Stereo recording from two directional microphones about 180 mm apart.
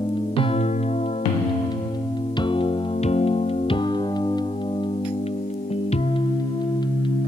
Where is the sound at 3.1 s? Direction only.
35° left (ahead or behind).